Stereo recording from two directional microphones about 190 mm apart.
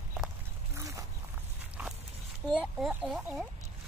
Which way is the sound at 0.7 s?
15° right (ahead or behind).